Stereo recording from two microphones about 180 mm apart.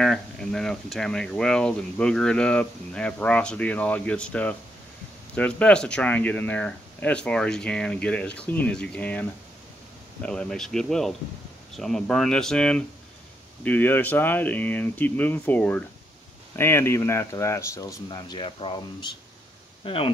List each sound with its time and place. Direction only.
0.0 s speech: 5° left (ahead or behind); by 20.1 s 30° left (ahead or behind)